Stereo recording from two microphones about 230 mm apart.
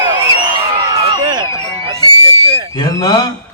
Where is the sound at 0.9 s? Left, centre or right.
Right.